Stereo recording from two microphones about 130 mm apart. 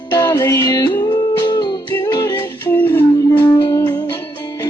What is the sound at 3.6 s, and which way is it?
Music, 30° left (ahead or behind).